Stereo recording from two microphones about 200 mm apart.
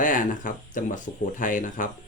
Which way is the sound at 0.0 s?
40° left (ahead or behind).